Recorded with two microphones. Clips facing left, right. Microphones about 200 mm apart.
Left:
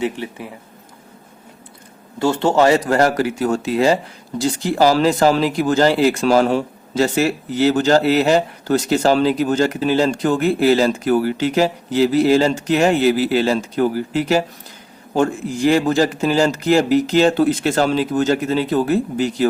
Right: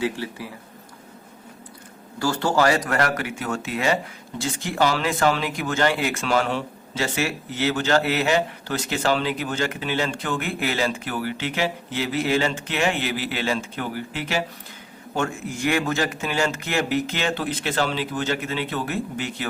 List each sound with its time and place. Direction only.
0.0 s speech: 20° left (ahead or behind)
2.1 s speech: 25° left (ahead or behind)